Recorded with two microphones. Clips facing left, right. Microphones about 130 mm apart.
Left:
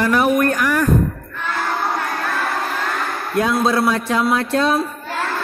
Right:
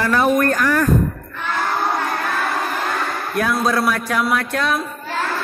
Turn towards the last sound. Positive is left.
turn(degrees=30)  # may be behind; listen again after turning